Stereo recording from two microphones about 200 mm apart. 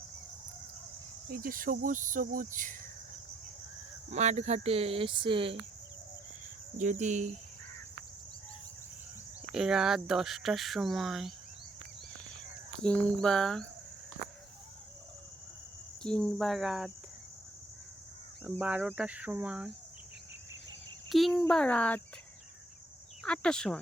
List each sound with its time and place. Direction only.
1.3 s speech: 45° right (ahead or behind)
4.1 s speech: 35° right (ahead or behind)
6.7 s speech: 35° right (ahead or behind)
9.5 s speech: centre (ahead or behind)
12.8 s speech: 5° left (ahead or behind)
16.0 s speech: 5° left (ahead or behind)
18.5 s speech: 5° right (ahead or behind)
18.9 s cricket: 5° right (ahead or behind)
21.1 s speech: centre (ahead or behind)
23.2 s speech: 5° left (ahead or behind)